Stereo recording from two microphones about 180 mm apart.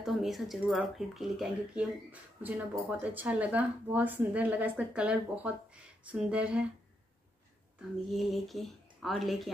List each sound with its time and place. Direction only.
0.0 s speech: centre (ahead or behind)
8.1 s speech: centre (ahead or behind)